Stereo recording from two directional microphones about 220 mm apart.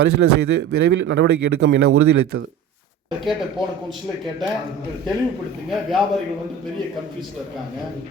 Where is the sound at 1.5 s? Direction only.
70° right (ahead or behind).